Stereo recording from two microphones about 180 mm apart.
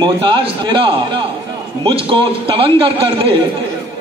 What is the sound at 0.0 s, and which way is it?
A man's voice, 25° right (ahead or behind).